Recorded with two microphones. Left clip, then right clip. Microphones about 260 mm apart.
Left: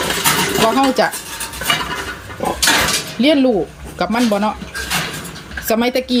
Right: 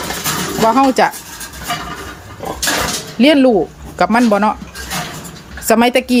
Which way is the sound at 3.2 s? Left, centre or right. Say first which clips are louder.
Right 4 dB; right.